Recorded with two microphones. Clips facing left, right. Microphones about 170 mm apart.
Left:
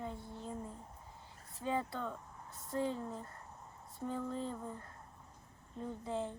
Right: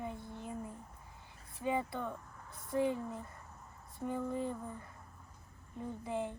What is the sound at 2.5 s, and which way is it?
Speech, 20° left (ahead or behind).